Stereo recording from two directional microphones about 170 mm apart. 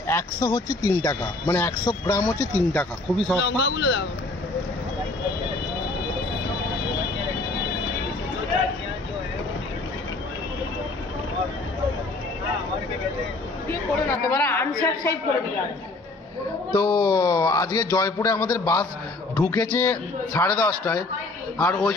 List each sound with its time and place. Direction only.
0.0 s speech: 20° left (ahead or behind)
3.3 s a man's voice: 90° left
13.7 s speech: 15° left (ahead or behind)
16.7 s a man's voice: 25° left (ahead or behind)
19.3 s speech: 10° left (ahead or behind)